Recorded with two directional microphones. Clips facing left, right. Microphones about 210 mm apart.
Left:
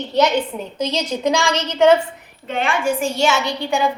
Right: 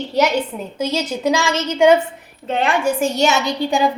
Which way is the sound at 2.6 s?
40° right (ahead or behind).